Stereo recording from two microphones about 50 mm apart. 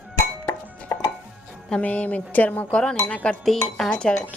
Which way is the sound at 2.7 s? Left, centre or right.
Centre.